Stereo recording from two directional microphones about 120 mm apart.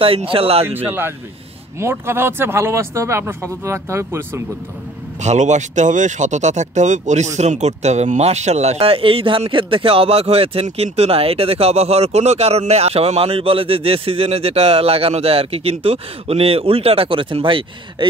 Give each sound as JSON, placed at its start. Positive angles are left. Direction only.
{"t": 0.0, "sound": "speech", "side_deg": -50}
{"t": 0.7, "sound": "speech", "side_deg": -15}
{"t": 5.2, "sound": "speech", "side_deg": -80}
{"t": 7.3, "sound": "speech", "side_deg": -70}